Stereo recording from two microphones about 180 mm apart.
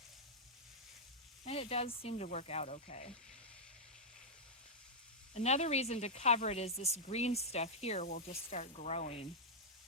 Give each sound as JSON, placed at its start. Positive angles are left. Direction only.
{"t": 1.5, "sound": "speech", "side_deg": 35}
{"t": 5.3, "sound": "speech", "side_deg": 35}